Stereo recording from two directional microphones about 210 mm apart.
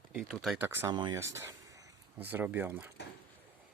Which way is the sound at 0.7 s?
15° right (ahead or behind).